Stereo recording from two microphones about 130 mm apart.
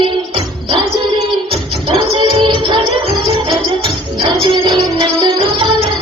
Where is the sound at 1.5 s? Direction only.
40° right (ahead or behind).